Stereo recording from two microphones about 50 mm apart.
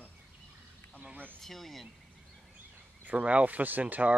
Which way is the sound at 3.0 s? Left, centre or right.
Right.